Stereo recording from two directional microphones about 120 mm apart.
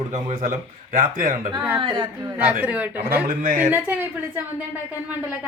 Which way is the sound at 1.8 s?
40° right (ahead or behind).